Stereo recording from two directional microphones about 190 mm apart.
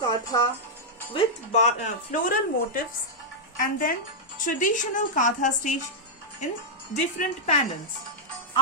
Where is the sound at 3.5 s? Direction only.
45° left (ahead or behind).